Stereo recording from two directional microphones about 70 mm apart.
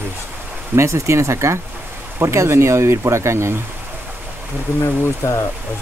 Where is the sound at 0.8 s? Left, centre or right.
Right.